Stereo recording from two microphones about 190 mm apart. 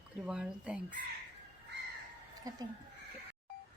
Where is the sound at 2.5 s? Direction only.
20° right (ahead or behind).